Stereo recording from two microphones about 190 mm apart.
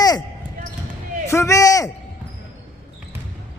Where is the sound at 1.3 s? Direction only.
15° left (ahead or behind).